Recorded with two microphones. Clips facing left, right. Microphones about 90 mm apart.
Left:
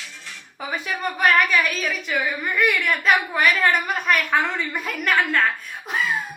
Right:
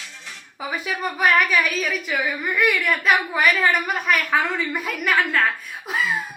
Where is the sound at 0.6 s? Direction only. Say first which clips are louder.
Right 1 dB; 5° right (ahead or behind).